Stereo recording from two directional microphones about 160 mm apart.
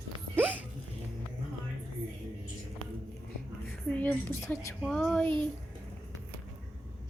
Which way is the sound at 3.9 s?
15° left (ahead or behind).